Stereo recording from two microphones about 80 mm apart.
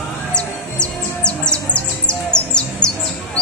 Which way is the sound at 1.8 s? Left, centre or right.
Centre.